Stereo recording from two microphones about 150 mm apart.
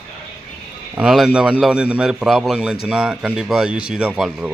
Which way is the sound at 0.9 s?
5° right (ahead or behind).